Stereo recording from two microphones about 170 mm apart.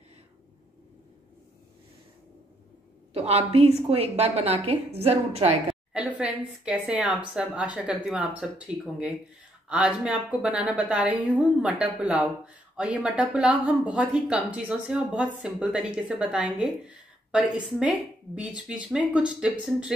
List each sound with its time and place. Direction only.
3.1 s a woman's voice: 35° right (ahead or behind)
5.9 s a woman's voice: 5° right (ahead or behind)